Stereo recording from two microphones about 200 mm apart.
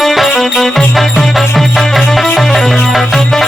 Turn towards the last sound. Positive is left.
turn(degrees=0)  # may be behind; listen again after turning